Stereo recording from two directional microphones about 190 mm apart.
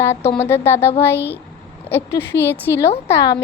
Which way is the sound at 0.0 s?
15° left (ahead or behind).